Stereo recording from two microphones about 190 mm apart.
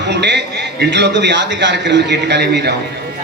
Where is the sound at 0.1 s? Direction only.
65° right (ahead or behind).